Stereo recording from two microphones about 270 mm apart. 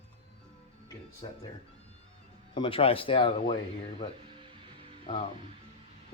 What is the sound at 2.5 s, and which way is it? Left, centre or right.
Speech, centre.